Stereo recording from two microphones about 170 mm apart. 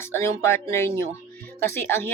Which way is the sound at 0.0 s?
15° left (ahead or behind).